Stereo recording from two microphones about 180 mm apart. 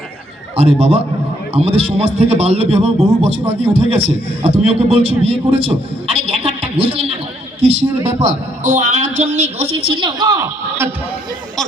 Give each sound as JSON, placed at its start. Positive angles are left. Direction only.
{"t": 0.5, "sound": "a man's voice", "side_deg": -35}